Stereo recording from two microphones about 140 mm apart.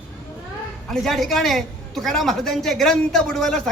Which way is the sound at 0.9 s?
Centre (ahead or behind).